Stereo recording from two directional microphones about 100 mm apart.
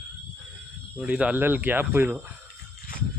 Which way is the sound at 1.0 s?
10° right (ahead or behind).